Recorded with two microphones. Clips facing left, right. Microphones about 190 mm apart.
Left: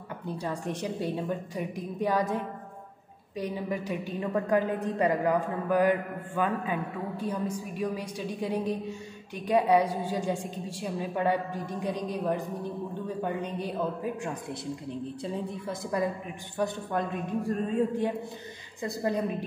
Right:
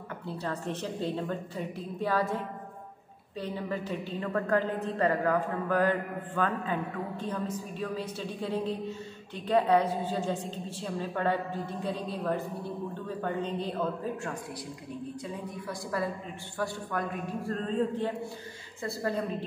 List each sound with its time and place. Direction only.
0.3 s a woman's voice: 15° left (ahead or behind)
15.9 s a woman's voice: 20° left (ahead or behind)